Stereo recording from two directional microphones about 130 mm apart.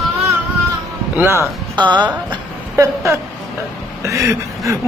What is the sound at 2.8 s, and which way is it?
Speech, 25° right (ahead or behind).